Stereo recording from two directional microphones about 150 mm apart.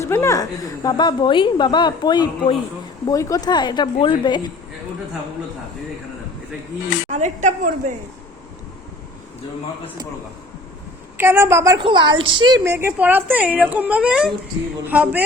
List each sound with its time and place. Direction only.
0.0 s a woman's voice: 20° left (ahead or behind)
7.1 s a woman's voice: 55° right (ahead or behind)
11.2 s speech: 15° right (ahead or behind)
11.8 s a woman's voice: 35° right (ahead or behind)
12.6 s speech: 15° right (ahead or behind)